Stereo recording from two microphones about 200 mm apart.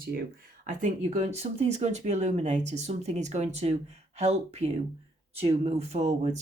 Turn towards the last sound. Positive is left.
turn(degrees=-35)  # may be behind; listen again after turning